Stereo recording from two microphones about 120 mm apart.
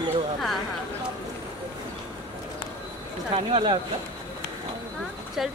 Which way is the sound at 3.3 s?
45° right (ahead or behind).